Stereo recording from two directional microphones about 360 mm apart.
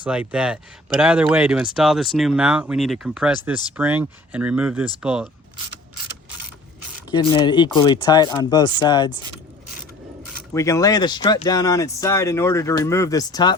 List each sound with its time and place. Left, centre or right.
0.0 s speech: centre
7.1 s speech: centre
10.5 s speech: centre